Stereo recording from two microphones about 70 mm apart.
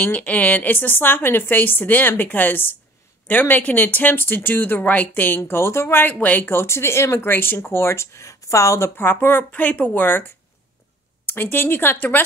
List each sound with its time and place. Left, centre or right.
0.0 s a woman's voice: left
5.4 s speech: left
6.1 s speech: left
11.2 s speech: left